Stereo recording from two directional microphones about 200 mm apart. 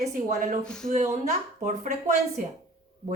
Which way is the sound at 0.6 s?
5° left (ahead or behind).